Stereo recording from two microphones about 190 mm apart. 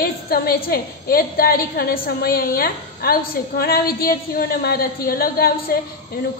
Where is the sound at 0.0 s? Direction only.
55° left (ahead or behind).